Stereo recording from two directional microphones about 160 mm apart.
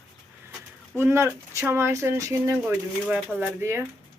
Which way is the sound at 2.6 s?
5° right (ahead or behind).